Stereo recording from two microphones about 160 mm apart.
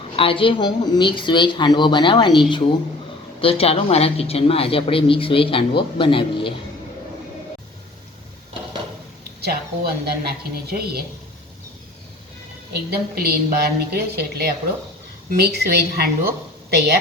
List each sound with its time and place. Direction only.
0.2 s speech: 35° left (ahead or behind)
3.4 s speech: 35° left (ahead or behind)
9.4 s speech: 75° right (ahead or behind)
12.9 s a woman's voice: 80° right